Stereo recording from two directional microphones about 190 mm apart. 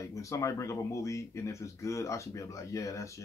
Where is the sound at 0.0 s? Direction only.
15° left (ahead or behind).